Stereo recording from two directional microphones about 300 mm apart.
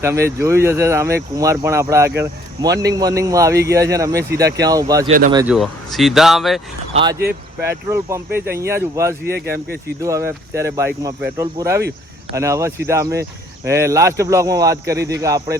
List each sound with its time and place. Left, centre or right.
0.0 s speech: centre
5.5 s speech: centre
6.9 s speech: centre
9.2 s speech: right
10.0 s speech: centre
11.8 s a sound: right
12.4 s speech: centre